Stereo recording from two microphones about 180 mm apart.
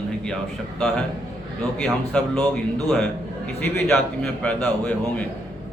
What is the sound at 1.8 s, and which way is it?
Speech, 5° left (ahead or behind).